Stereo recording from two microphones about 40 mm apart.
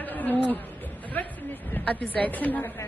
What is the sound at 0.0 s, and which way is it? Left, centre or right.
Insect, left.